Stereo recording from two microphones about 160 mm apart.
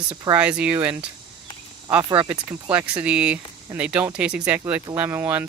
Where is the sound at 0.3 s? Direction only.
10° right (ahead or behind).